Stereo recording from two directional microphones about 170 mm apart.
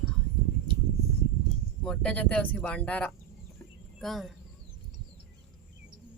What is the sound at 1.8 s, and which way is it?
Speech, 5° left (ahead or behind).